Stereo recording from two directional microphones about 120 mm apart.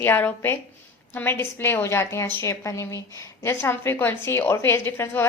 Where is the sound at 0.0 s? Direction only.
15° left (ahead or behind).